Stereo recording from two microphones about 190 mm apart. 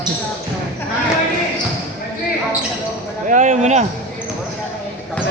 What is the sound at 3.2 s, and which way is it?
Speech, 40° right (ahead or behind).